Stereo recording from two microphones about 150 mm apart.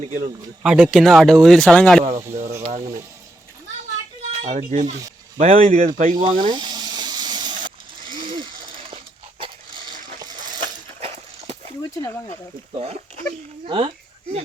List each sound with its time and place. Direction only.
0.1 s speech: 55° right (ahead or behind)
0.6 s speech: 5° right (ahead or behind)
4.4 s speech: 55° right (ahead or behind)
6.2 s snake: 30° right (ahead or behind)
8.0 s coin: 35° right (ahead or behind)
9.7 s a sound: 30° right (ahead or behind)
10.2 s coin: 30° right (ahead or behind)
11.0 s horse: 45° right (ahead or behind)
11.9 s speech: 25° left (ahead or behind)
12.7 s speech: 45° right (ahead or behind)